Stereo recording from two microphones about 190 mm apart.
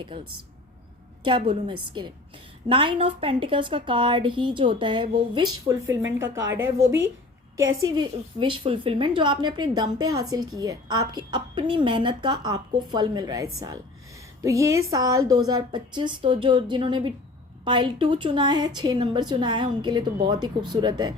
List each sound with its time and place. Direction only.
1.2 s a woman's voice: 25° right (ahead or behind)
7.8 s a woman's voice: 25° right (ahead or behind)